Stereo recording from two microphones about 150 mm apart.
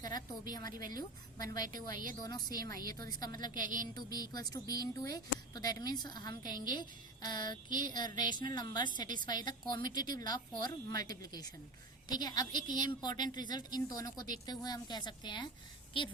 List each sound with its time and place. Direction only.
0.0 s a sound: 25° left (ahead or behind)
0.8 s a woman's voice: 65° right (ahead or behind)
1.4 s a woman's voice: 25° left (ahead or behind)